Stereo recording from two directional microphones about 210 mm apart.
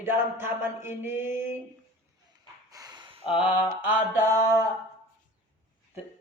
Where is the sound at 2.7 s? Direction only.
20° right (ahead or behind).